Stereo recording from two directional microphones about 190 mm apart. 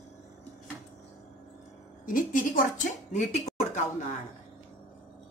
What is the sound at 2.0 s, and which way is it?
Speech, 45° left (ahead or behind).